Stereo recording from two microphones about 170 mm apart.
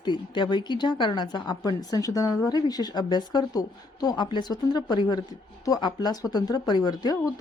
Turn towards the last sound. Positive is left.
turn(degrees=25)  # may be behind; listen again after turning